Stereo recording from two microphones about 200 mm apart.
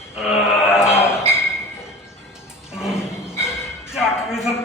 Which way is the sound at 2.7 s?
Centre (ahead or behind).